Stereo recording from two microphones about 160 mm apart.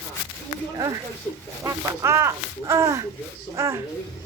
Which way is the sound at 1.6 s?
20° right (ahead or behind).